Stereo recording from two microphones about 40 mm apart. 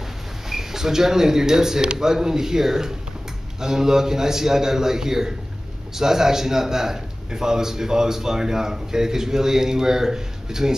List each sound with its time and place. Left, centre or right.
0.5 s a man's voice: centre